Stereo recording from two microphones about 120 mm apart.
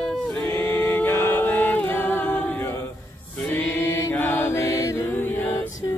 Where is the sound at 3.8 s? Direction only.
20° left (ahead or behind).